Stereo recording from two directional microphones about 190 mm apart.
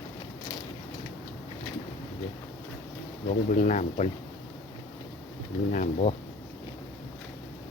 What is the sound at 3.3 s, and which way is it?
Speech, 40° left (ahead or behind).